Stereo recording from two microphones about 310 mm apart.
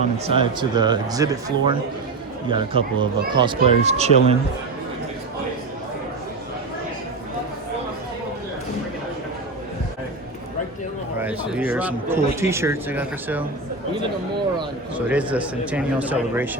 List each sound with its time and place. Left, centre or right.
0.3 s speech: centre
11.2 s speech: centre
14.9 s a man's voice: centre